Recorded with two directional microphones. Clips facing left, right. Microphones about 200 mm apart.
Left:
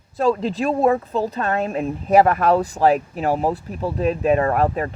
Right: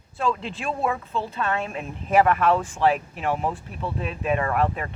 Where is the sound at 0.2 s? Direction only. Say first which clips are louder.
Left 8 dB; 40° left (ahead or behind).